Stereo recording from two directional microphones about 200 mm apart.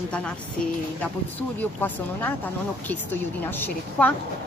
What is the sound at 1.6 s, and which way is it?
Speech, 10° left (ahead or behind).